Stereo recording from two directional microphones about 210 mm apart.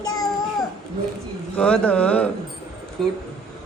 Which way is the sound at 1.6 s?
5° left (ahead or behind).